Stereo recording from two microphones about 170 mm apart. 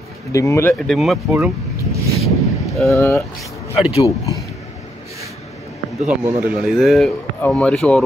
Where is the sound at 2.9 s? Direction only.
15° left (ahead or behind).